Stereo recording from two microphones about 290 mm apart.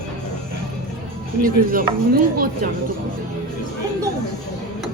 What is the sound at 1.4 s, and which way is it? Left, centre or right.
Speech, right.